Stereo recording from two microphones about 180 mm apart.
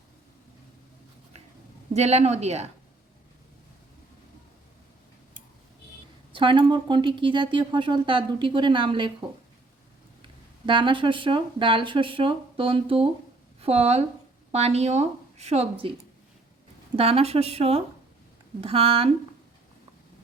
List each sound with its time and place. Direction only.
1.9 s speech: 35° right (ahead or behind)
6.3 s speech: 25° right (ahead or behind)
10.7 s a woman's voice: 25° right (ahead or behind)
16.9 s speech: 35° right (ahead or behind)